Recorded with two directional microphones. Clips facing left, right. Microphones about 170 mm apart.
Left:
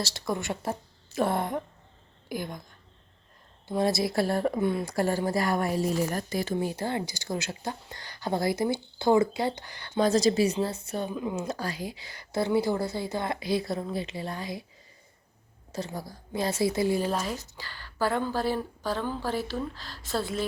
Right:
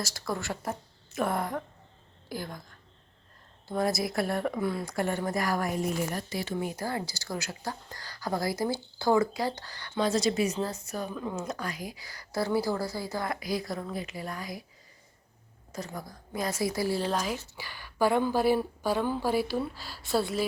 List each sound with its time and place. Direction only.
0.0 s a woman's voice: 20° left (ahead or behind)
3.7 s a woman's voice: 25° left (ahead or behind)
4.9 s a woman's voice: 35° left (ahead or behind)
6.1 s a woman's voice: 45° left (ahead or behind); by 10.0 s 20° left (ahead or behind)
10.0 s a woman's voice: 40° left (ahead or behind)
11.2 s speech: 15° left (ahead or behind)
11.4 s a woman's voice: 30° left (ahead or behind)
15.7 s a woman's voice: 30° left (ahead or behind)
17.1 s a woman's voice: 5° left (ahead or behind)
17.6 s a woman's voice: 15° right (ahead or behind)